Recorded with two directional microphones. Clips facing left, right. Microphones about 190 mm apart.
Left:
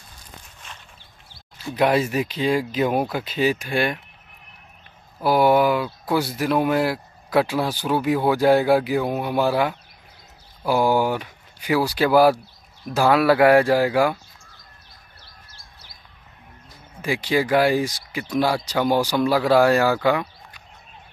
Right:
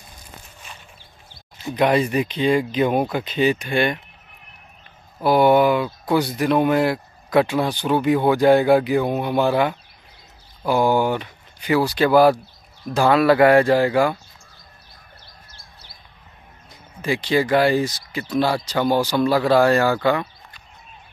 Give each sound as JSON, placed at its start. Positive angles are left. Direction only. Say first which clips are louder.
{"t": 1.3, "sound": "a sound", "louder": "right 2 dB", "side_deg": -20}
{"t": 1.8, "sound": "speech", "louder": "right 1 dB", "side_deg": 5}
{"t": 5.2, "sound": "speech", "louder": "right 2 dB", "side_deg": 5}
{"t": 17.0, "sound": "speech", "louder": "right 2 dB", "side_deg": 10}